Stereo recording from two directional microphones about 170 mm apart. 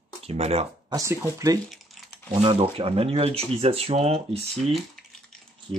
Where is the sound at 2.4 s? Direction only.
35° right (ahead or behind).